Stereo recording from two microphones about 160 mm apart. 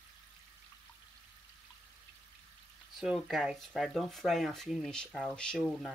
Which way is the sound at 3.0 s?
Centre (ahead or behind).